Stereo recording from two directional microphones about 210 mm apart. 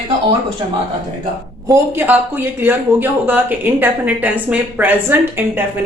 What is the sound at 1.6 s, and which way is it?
Speech, 15° right (ahead or behind).